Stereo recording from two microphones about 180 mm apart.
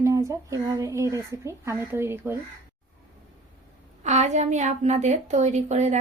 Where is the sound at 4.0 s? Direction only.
40° right (ahead or behind).